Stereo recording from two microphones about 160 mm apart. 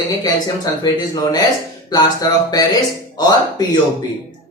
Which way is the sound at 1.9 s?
25° left (ahead or behind).